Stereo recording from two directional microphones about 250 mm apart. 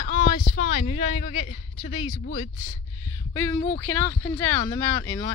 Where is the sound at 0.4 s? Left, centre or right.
Centre.